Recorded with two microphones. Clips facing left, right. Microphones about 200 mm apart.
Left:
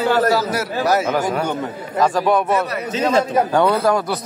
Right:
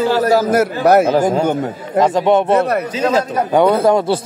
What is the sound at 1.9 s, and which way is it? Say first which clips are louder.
A man's voice: right 4 dB; 20° right (ahead or behind).